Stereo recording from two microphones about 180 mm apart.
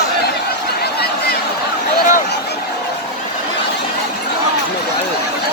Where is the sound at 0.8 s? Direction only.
60° left (ahead or behind).